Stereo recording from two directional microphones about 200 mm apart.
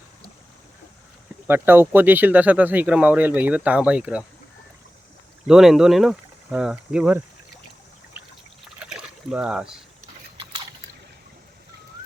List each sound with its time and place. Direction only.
1.5 s speech: 10° right (ahead or behind)
5.5 s speech: centre (ahead or behind)
8.8 s rowboat: 5° right (ahead or behind)
10.3 s biting: 25° right (ahead or behind)